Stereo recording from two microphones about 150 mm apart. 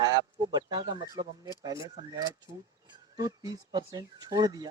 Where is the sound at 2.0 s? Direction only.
25° right (ahead or behind).